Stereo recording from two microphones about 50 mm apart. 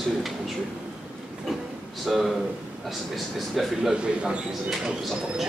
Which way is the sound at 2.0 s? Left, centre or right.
Centre.